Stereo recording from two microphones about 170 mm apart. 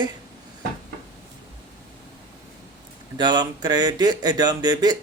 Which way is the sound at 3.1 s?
25° right (ahead or behind).